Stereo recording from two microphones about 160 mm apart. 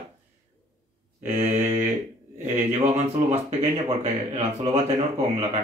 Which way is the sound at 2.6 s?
45° right (ahead or behind).